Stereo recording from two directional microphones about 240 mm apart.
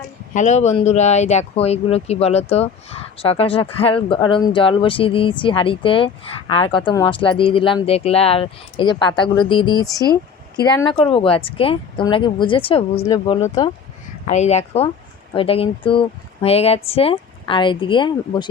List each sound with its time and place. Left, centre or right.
0.3 s speech: left